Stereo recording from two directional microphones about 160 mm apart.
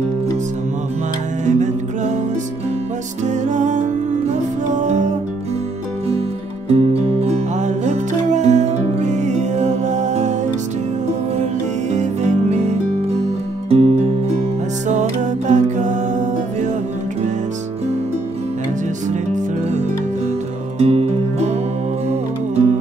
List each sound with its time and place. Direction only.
1.4 s music: 50° right (ahead or behind)
3.3 s music: 50° right (ahead or behind)
6.7 s music: 40° right (ahead or behind)
11.9 s music: 45° right (ahead or behind)
20.8 s music: 40° right (ahead or behind)